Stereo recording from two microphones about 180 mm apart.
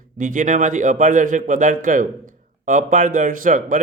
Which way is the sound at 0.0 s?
45° right (ahead or behind).